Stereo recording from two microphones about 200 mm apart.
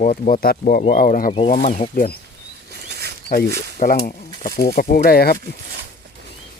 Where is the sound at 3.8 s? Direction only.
40° left (ahead or behind).